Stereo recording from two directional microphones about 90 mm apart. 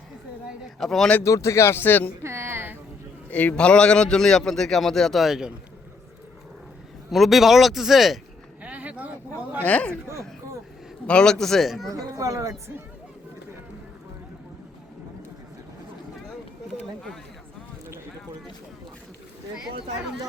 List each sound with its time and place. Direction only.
0.8 s a man's voice: 5° left (ahead or behind)
1.2 s speech: 35° left (ahead or behind)
2.2 s a sound: 30° right (ahead or behind)
3.3 s a man's voice: 15° left (ahead or behind); by 5.5 s 5° right (ahead or behind)
7.1 s a man's voice: centre (ahead or behind)
8.6 s a sound: 15° right (ahead or behind)
9.6 s speech: 15° left (ahead or behind)
11.0 s a man's voice: 10° left (ahead or behind)
11.9 s speech: 45° right (ahead or behind)